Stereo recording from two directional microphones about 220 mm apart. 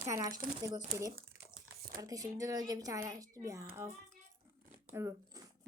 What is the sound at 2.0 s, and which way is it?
Speech, 15° right (ahead or behind).